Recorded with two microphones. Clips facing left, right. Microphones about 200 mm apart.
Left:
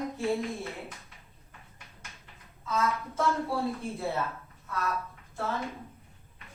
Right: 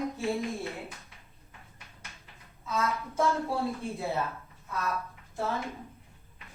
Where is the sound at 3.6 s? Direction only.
Centre (ahead or behind).